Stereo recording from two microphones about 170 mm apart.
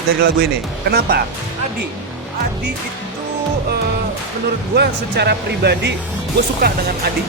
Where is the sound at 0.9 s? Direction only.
65° right (ahead or behind).